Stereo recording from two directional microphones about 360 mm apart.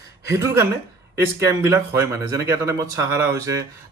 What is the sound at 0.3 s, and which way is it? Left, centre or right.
Speech, centre.